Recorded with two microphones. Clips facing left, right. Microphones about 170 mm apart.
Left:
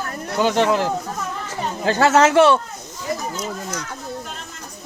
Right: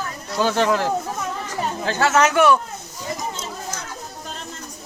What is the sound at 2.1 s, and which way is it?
Speech, 30° left (ahead or behind).